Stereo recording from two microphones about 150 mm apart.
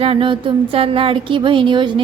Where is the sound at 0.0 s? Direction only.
35° right (ahead or behind).